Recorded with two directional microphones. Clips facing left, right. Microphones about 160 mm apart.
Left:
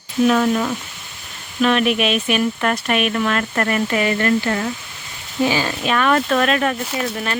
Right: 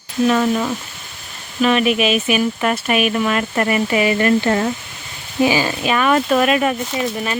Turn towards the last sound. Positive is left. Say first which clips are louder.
# right 2 dB
turn(degrees=0)  # may be behind; listen again after turning